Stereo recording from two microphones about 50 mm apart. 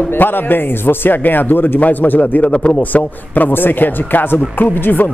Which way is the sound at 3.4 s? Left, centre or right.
Left.